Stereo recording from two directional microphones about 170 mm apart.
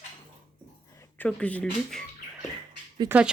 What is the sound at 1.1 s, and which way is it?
Speech, 10° left (ahead or behind).